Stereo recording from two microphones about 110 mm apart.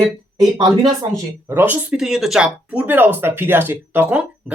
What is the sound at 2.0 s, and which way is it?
Speech, centre (ahead or behind).